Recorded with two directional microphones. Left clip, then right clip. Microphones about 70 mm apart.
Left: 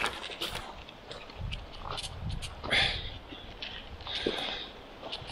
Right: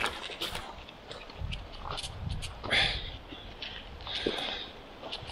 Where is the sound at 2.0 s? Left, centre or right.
Centre.